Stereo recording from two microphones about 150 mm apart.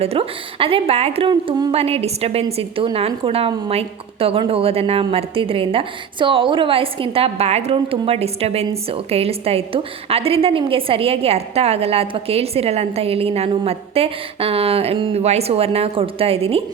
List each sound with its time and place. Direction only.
0.0 s a woman's voice: 40° right (ahead or behind)
1.3 s speech: 30° right (ahead or behind)
1.7 s a woman's voice: 40° right (ahead or behind)